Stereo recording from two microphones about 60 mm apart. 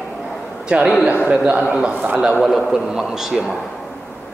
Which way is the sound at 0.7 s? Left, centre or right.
Right.